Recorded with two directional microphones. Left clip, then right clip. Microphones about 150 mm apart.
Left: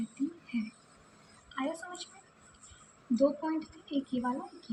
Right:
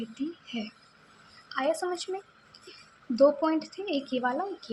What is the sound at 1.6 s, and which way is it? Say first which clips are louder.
Speech: right 9 dB; 30° right (ahead or behind).